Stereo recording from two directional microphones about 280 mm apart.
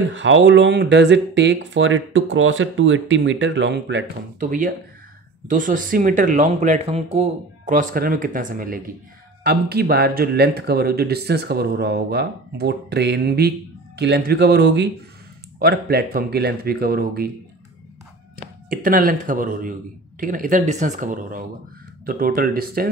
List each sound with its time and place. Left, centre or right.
0.1 s speech: right
18.7 s speech: right